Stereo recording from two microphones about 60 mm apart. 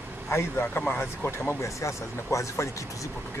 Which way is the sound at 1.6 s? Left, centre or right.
Left.